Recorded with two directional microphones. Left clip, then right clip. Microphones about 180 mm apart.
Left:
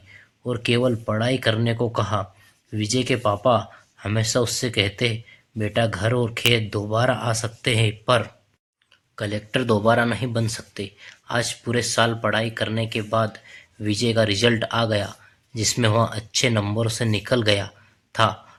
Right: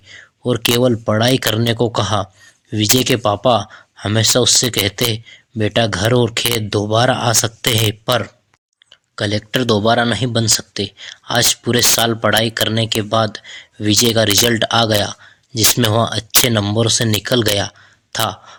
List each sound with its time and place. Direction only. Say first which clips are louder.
0.1 s speech: right 9 dB; 40° right (ahead or behind)